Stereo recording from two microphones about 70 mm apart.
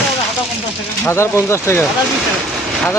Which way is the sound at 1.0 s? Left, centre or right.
Left.